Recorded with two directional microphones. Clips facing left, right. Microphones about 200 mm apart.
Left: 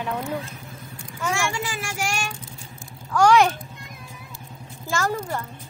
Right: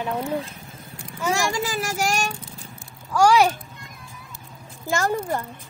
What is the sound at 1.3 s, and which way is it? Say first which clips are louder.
Speech: right 3 dB; 35° right (ahead or behind).